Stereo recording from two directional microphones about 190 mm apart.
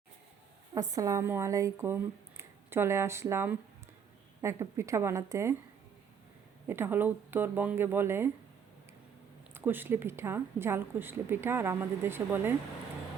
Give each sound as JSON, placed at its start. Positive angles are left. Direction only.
{"t": 0.7, "sound": "a woman's voice", "side_deg": -15}
{"t": 6.7, "sound": "a woman's voice", "side_deg": -10}
{"t": 9.6, "sound": "a woman's voice", "side_deg": -10}